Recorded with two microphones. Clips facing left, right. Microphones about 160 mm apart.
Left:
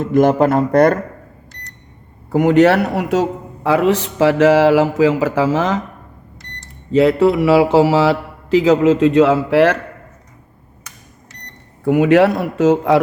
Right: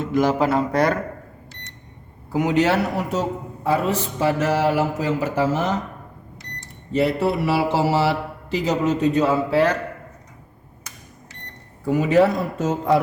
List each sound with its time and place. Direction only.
0.1 s speech: 50° left (ahead or behind)
2.3 s a man's voice: 55° left (ahead or behind); by 5.8 s 90° left
6.9 s a man's voice: 90° left
11.9 s speech: 70° left (ahead or behind); by 13.0 s 85° left